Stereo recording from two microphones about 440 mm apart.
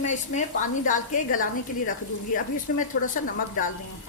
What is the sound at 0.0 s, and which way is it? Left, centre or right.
A woman's voice, centre.